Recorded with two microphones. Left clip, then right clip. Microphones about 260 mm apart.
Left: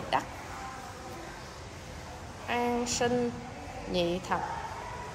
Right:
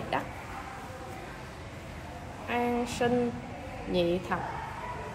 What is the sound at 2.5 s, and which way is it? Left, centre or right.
A woman's voice, centre.